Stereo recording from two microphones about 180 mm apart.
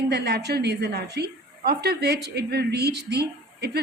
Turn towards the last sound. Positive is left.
turn(degrees=-65)  # may be behind; listen again after turning